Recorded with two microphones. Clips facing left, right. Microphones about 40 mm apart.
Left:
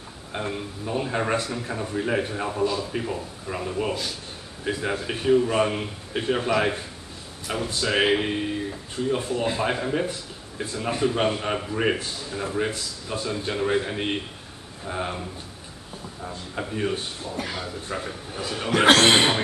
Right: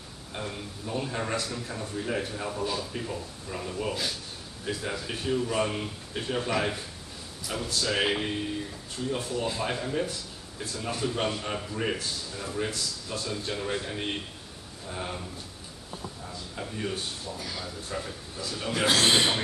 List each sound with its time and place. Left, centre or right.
0.3 s a man's voice: left
2.6 s a man's voice: centre
2.9 s a man's voice: left
16.3 s a man's voice: left
18.3 s a man's voice: left
18.9 s speech: left